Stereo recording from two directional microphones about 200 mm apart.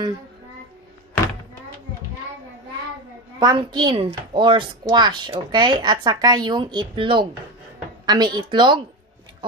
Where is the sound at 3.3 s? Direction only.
20° right (ahead or behind).